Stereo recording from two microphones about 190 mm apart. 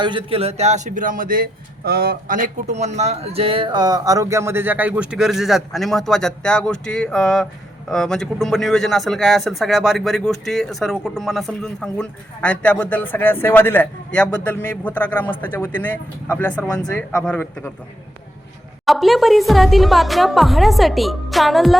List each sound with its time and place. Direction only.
0.0 s a man's voice: 25° right (ahead or behind); by 17.7 s 10° left (ahead or behind)
18.9 s a man's voice: centre (ahead or behind)